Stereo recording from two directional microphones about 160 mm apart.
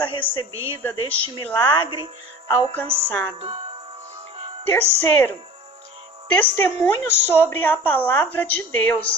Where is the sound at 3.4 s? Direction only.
35° right (ahead or behind).